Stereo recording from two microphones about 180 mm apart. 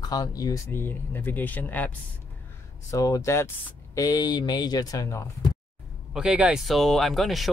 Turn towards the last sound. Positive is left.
turn(degrees=0)  # may be behind; listen again after turning